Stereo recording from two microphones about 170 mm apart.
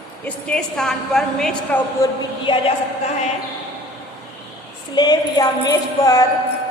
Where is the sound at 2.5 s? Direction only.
30° left (ahead or behind).